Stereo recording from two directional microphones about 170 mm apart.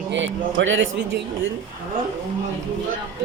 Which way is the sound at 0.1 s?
90° right.